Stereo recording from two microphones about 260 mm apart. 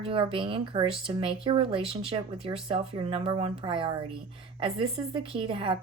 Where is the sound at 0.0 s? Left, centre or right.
Centre.